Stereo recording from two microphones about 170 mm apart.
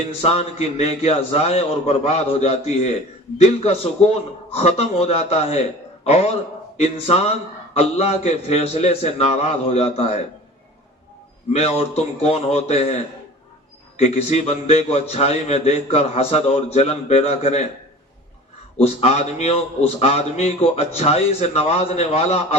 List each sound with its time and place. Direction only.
0.2 s a man's voice: 40° left (ahead or behind)
11.5 s a man's voice: 35° left (ahead or behind)
18.8 s a man's voice: 40° left (ahead or behind)